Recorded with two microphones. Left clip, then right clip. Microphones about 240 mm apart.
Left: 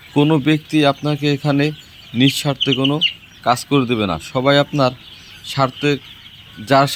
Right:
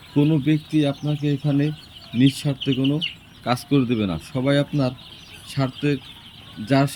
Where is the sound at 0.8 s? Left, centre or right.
Left.